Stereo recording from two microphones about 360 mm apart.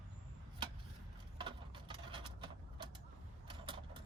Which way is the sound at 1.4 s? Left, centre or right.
Centre.